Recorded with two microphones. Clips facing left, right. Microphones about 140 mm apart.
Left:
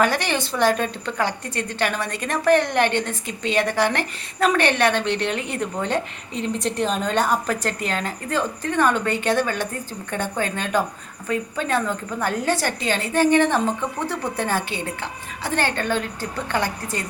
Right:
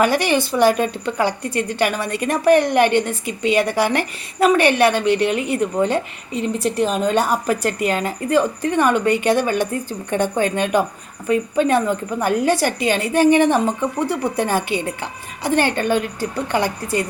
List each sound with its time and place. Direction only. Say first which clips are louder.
0.0 s a woman's voice: right 4 dB; 10° right (ahead or behind)